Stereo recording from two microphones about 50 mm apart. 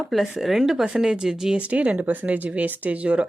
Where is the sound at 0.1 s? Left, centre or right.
Centre.